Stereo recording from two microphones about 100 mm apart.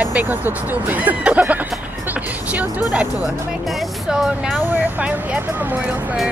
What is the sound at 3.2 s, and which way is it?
Speech, centre (ahead or behind).